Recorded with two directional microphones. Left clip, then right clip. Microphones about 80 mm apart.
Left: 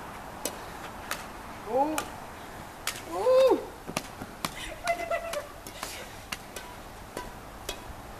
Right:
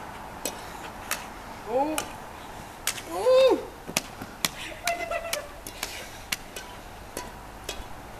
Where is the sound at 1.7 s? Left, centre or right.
Right.